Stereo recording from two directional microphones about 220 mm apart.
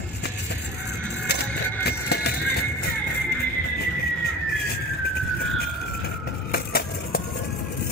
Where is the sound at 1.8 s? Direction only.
45° left (ahead or behind).